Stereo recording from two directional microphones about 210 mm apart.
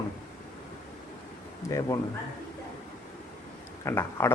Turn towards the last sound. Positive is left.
turn(degrees=10)  # may be behind; listen again after turning